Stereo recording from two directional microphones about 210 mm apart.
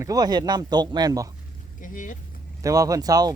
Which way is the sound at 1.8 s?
40° left (ahead or behind).